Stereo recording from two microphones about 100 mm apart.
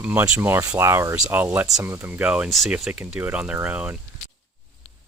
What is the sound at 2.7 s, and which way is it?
Speech, 15° right (ahead or behind).